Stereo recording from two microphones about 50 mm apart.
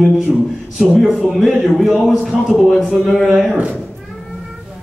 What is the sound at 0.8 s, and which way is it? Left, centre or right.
A man's voice, centre.